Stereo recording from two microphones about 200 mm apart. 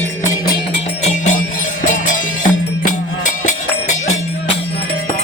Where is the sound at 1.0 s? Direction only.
40° left (ahead or behind).